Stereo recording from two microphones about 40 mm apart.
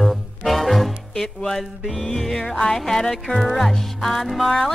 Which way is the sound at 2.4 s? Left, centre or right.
Left.